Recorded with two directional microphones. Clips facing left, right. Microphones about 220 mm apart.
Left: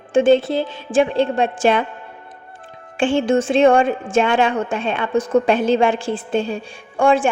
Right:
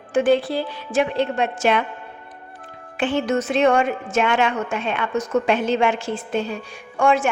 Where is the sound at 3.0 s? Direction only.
30° left (ahead or behind).